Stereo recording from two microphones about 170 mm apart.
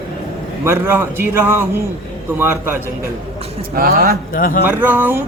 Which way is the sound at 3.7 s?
60° right (ahead or behind).